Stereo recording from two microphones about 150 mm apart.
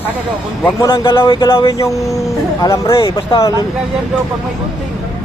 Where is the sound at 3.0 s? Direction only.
35° left (ahead or behind).